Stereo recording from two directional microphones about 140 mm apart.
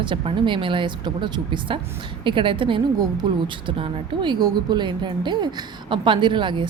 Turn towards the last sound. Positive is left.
turn(degrees=-35)  # may be behind; listen again after turning